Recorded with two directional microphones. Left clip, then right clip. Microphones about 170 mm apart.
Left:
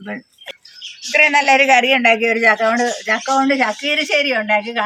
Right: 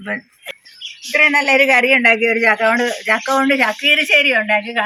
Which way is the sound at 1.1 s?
15° left (ahead or behind).